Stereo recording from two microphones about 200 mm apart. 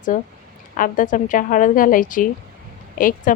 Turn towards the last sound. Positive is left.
turn(degrees=45)  # may be behind; listen again after turning